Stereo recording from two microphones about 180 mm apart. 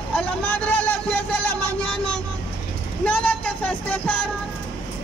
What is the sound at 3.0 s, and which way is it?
Speech, 10° left (ahead or behind).